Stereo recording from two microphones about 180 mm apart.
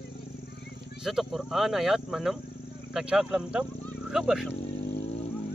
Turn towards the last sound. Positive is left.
turn(degrees=35)  # may be behind; listen again after turning